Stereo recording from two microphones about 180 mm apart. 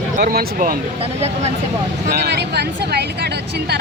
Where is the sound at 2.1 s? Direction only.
65° right (ahead or behind).